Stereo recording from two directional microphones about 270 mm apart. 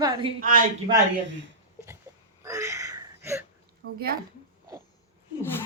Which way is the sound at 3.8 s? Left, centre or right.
Right.